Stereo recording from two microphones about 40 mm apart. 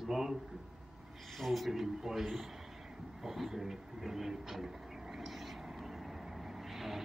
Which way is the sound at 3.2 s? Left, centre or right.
Centre.